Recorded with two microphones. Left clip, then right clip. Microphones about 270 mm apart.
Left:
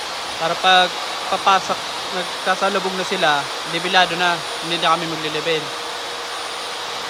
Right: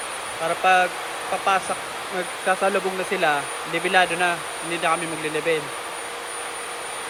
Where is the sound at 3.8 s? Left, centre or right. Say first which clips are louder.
Left 3 dB; centre.